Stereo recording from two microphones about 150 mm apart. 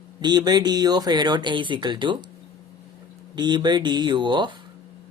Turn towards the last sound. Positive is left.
turn(degrees=-30)  # may be behind; listen again after turning